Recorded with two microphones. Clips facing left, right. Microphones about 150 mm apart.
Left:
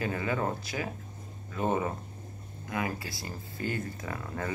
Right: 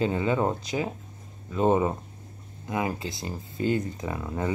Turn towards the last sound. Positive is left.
turn(degrees=-20)  # may be behind; listen again after turning